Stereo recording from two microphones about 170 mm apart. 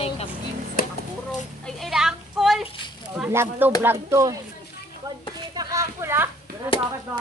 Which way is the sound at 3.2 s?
15° right (ahead or behind).